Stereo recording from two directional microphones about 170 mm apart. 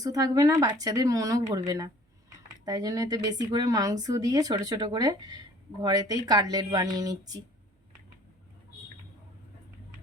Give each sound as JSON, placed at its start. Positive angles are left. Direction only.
{"t": 0.0, "sound": "speech", "side_deg": -20}